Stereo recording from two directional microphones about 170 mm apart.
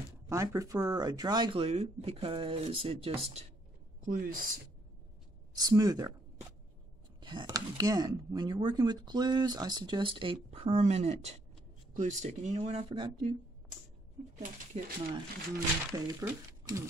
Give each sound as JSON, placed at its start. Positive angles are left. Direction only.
{"t": 0.3, "sound": "speech", "side_deg": -15}
{"t": 4.0, "sound": "a woman's voice", "side_deg": -55}
{"t": 5.6, "sound": "speech", "side_deg": -20}
{"t": 7.2, "sound": "speech", "side_deg": -25}
{"t": 14.4, "sound": "speech", "side_deg": -50}
{"t": 15.9, "sound": "speech", "side_deg": -20}